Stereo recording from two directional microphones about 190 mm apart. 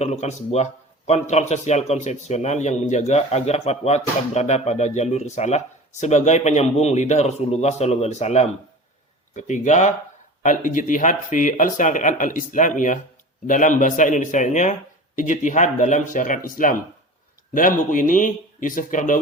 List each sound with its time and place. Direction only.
0.0 s a man's voice: 35° left (ahead or behind)